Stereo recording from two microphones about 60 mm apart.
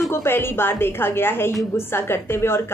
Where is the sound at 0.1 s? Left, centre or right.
Left.